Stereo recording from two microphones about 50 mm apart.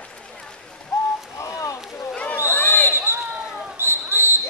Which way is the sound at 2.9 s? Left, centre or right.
Right.